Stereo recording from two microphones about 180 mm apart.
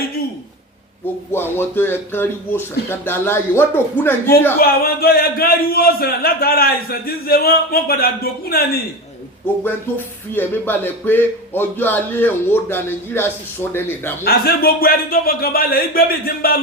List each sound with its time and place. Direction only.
1.0 s a man's voice: 10° left (ahead or behind)
4.6 s speech: 55° left (ahead or behind)
10.3 s a man's voice: 10° left (ahead or behind)
14.3 s speech: 60° left (ahead or behind)